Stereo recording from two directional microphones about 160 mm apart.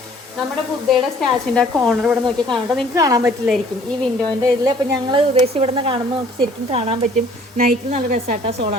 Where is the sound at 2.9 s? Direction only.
20° right (ahead or behind).